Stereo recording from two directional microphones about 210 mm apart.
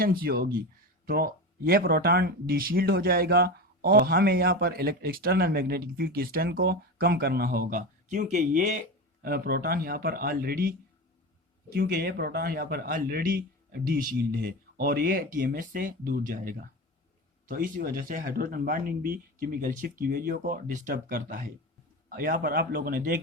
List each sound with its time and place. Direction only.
0.0 s speech: 45° right (ahead or behind)
9.2 s speech: 45° right (ahead or behind)
11.7 s speech: 50° right (ahead or behind)